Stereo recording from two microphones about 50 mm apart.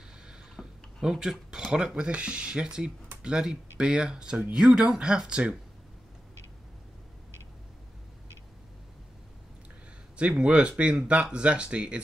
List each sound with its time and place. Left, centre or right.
0.6 s a sound: centre
1.0 s speech: centre
10.1 s speech: right